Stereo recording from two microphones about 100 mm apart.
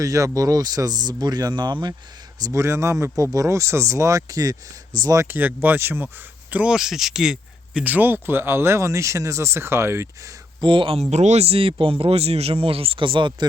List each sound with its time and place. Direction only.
0.0 s speech: 35° right (ahead or behind)
2.4 s speech: 30° right (ahead or behind)
6.5 s speech: 10° right (ahead or behind)
7.9 s speech: 20° right (ahead or behind)
10.6 s speech: 60° right (ahead or behind)
11.1 s speech: 90° right; by 13.3 s 55° right (ahead or behind)